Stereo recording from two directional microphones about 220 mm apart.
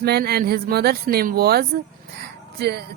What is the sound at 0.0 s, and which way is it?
Speech, 45° right (ahead or behind).